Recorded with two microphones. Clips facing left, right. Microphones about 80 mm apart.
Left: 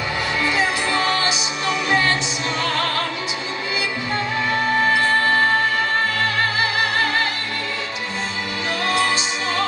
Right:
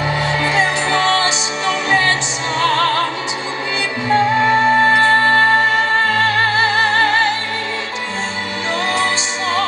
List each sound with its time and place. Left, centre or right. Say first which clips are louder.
0.4 s music: right 3 dB; right
4.1 s music: right 10 dB; right